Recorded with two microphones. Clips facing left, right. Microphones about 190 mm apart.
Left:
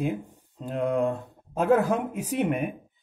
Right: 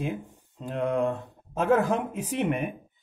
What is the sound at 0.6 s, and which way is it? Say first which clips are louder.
Speech: left 1 dB; 35° left (ahead or behind).